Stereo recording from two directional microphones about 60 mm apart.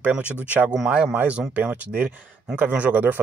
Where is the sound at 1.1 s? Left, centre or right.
Right.